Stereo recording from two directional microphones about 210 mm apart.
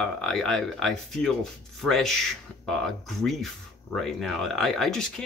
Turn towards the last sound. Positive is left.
turn(degrees=5)  # may be behind; listen again after turning